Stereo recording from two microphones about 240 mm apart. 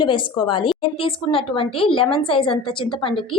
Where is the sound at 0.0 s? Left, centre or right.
Centre.